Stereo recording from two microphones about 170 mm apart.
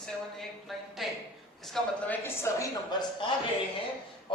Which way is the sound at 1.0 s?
Centre (ahead or behind).